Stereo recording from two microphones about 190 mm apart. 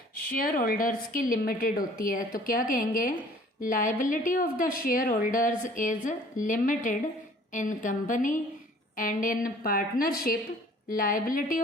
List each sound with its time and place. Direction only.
0.3 s a woman's voice: 50° left (ahead or behind)